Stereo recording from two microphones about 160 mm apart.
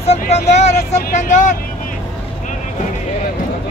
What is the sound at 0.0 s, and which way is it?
Speech, 40° left (ahead or behind).